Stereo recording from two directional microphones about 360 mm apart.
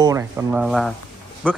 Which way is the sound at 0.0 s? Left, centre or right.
Centre.